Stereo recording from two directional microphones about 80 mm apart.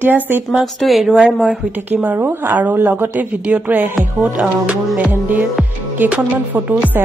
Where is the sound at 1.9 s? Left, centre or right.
Right.